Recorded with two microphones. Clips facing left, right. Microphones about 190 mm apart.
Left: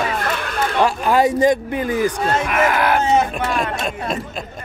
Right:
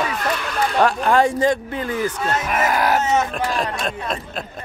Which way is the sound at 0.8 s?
5° left (ahead or behind).